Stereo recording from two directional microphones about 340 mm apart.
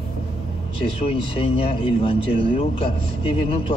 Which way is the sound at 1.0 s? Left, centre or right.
Centre.